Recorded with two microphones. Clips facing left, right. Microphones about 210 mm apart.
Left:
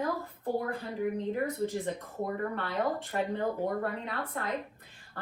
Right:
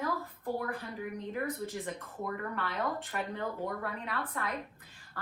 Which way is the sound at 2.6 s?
30° left (ahead or behind).